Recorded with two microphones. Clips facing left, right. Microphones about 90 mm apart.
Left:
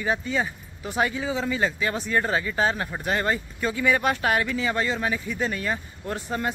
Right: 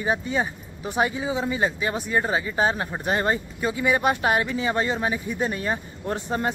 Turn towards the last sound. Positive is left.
turn(degrees=-25)  # may be behind; listen again after turning